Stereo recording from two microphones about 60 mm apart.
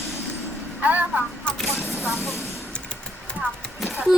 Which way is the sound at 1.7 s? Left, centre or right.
Left.